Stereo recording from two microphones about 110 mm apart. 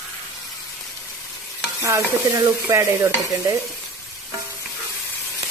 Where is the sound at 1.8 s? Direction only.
30° right (ahead or behind).